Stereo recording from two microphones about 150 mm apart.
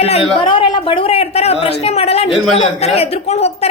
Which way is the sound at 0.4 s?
35° left (ahead or behind).